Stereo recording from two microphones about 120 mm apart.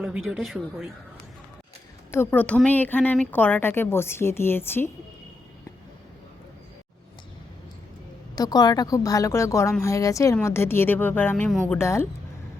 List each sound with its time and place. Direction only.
0.0 s speech: 5° right (ahead or behind)
2.0 s a woman's voice: 20° left (ahead or behind)
8.4 s a woman's voice: 35° left (ahead or behind)